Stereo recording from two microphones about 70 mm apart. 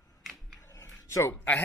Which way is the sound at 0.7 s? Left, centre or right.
Left.